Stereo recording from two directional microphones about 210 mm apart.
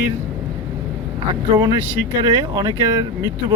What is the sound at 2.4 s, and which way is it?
Speech, 20° right (ahead or behind).